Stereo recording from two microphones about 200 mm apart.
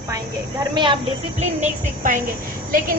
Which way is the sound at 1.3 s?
35° right (ahead or behind).